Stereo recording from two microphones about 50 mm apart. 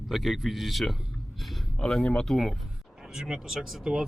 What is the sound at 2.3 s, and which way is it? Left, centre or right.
Speech, centre.